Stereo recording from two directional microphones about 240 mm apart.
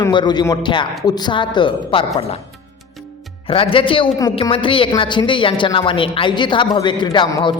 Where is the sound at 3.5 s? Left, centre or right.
Left.